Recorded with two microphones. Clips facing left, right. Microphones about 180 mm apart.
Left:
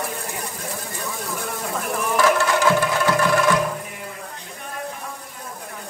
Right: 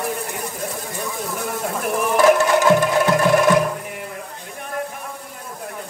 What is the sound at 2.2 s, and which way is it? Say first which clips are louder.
Music: right 4 dB; 20° right (ahead or behind).